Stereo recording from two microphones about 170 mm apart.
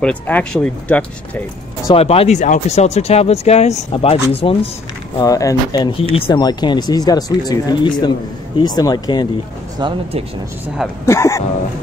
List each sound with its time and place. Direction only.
0.0 s speech: 5° left (ahead or behind)
2.0 s speech: 35° left (ahead or behind)
5.2 s speech: 20° left (ahead or behind)
9.8 s speech: 30° right (ahead or behind)
11.1 s speech: 15° left (ahead or behind)